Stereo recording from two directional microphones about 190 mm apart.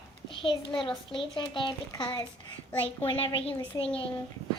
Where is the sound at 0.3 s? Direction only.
25° left (ahead or behind).